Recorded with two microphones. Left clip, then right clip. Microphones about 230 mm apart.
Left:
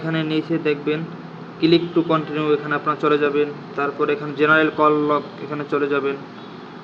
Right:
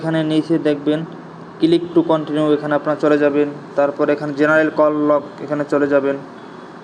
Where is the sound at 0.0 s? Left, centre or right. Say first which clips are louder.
Right 5 dB; centre.